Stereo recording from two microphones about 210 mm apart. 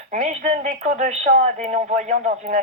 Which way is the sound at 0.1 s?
35° right (ahead or behind).